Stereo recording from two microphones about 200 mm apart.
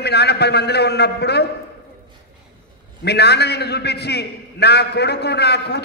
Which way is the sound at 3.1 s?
55° left (ahead or behind).